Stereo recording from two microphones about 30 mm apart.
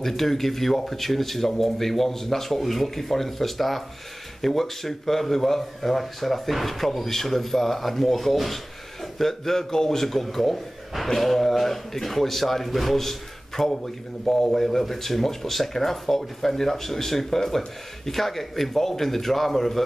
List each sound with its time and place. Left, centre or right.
0.0 s speech: centre
14.2 s a man's voice: centre
14.6 s speech: centre